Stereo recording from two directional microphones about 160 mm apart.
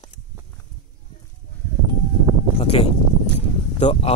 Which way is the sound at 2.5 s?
40° left (ahead or behind).